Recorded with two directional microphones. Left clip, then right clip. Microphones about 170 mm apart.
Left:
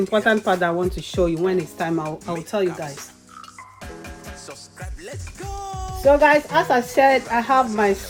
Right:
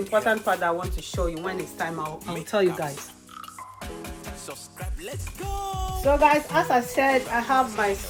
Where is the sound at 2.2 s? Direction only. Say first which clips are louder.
Right 3 dB; centre (ahead or behind).